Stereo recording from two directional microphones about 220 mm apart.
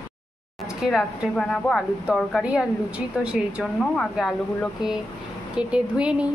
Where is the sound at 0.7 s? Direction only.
Centre (ahead or behind).